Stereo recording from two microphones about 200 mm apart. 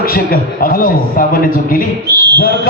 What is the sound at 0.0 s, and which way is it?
A man's voice, 45° left (ahead or behind).